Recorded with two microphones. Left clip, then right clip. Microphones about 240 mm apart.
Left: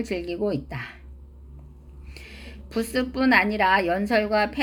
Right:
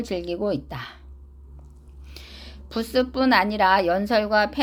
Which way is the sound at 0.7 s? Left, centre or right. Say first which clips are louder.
Even; right.